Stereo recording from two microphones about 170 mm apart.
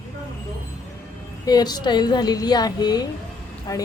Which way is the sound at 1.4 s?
25° left (ahead or behind).